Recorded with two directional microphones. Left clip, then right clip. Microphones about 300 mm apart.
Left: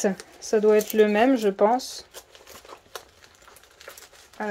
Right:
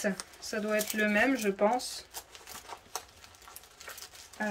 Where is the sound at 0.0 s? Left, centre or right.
Centre.